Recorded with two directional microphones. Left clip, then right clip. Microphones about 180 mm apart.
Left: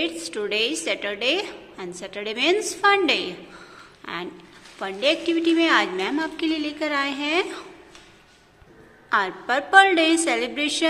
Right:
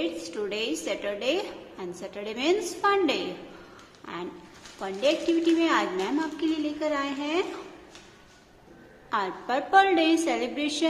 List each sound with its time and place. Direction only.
0.0 s a woman's voice: 15° left (ahead or behind)
9.1 s a woman's voice: 10° left (ahead or behind)